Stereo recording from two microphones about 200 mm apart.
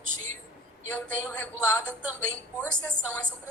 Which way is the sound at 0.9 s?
5° left (ahead or behind).